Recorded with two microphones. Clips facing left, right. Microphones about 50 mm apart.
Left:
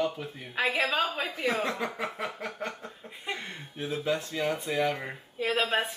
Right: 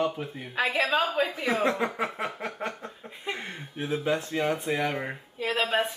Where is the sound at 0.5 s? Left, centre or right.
Centre.